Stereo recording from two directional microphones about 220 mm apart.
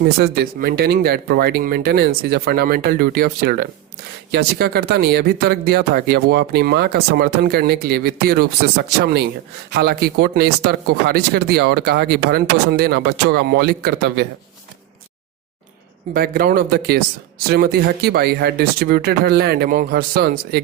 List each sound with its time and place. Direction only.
0.0 s speech: 45° right (ahead or behind)
16.1 s speech: 40° right (ahead or behind)